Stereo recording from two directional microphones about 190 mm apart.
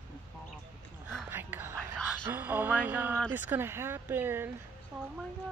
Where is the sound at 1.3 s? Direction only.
10° right (ahead or behind).